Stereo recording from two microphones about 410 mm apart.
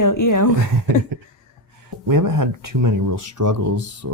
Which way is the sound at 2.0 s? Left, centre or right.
Right.